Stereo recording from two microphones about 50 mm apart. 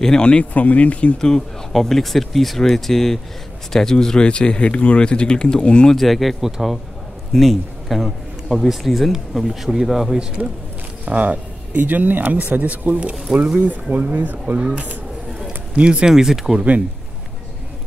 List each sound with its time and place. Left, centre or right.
0.0 s speech: centre
0.5 s speech: left
1.1 s speech: centre
1.7 s a man's voice: centre
5.9 s a man's voice: centre
10.4 s speech: centre
11.1 s speech: right
15.7 s speech: right
16.1 s speech: centre